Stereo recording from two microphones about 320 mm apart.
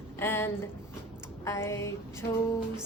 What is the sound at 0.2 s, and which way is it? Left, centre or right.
A woman's voice, centre.